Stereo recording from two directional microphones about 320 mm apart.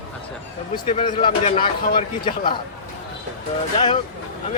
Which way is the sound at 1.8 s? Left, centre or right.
Left.